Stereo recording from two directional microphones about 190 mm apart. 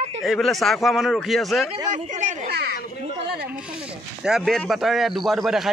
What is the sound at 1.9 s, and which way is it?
Speech, 40° right (ahead or behind).